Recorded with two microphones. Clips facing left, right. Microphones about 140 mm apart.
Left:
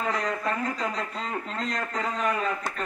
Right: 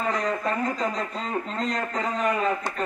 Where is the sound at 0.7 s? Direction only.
Centre (ahead or behind).